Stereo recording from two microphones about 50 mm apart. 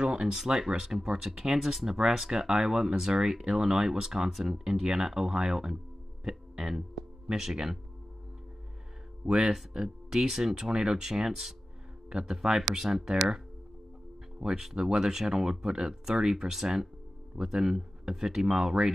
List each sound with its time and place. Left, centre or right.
0.0 s a sound: right
0.3 s speech: centre
9.2 s speech: centre
14.4 s speech: centre